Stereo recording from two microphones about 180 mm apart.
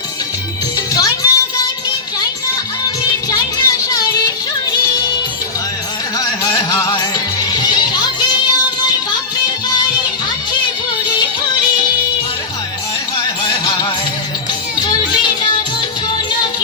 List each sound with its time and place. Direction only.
0.9 s music: 20° left (ahead or behind)
2.8 s music: 20° left (ahead or behind)
6.1 s a sound: 20° left (ahead or behind)
7.5 s music: 25° left (ahead or behind)
13.5 s music: 25° left (ahead or behind)